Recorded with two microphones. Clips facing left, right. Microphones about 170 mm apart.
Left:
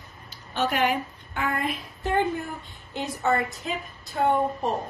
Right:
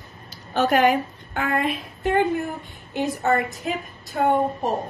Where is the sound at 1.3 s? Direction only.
65° right (ahead or behind).